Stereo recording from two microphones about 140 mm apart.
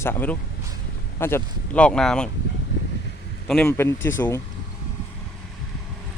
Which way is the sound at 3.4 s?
5° left (ahead or behind).